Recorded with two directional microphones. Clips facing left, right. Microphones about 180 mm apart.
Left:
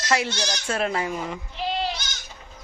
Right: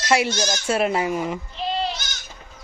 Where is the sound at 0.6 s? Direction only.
10° right (ahead or behind).